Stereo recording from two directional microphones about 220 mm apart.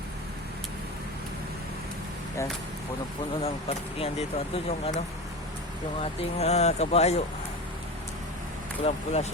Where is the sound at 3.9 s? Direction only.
25° left (ahead or behind).